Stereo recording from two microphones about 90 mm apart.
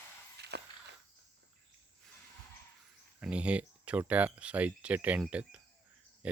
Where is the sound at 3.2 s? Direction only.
15° right (ahead or behind).